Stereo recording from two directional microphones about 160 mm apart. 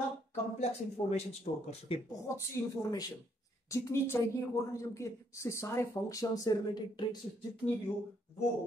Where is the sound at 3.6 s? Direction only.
20° left (ahead or behind).